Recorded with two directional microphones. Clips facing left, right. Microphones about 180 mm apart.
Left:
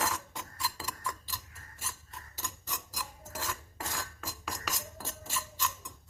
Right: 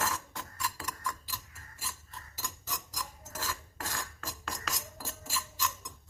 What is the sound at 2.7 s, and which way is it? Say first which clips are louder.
Filing: right 1 dB; 10° left (ahead or behind).